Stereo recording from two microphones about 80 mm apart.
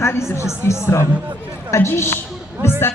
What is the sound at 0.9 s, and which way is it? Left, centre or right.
A man's voice, left.